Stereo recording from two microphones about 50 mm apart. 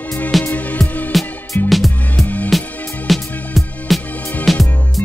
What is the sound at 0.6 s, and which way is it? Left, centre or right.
Music, left.